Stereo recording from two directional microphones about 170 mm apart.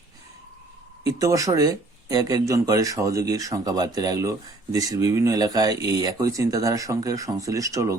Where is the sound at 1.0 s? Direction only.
20° right (ahead or behind).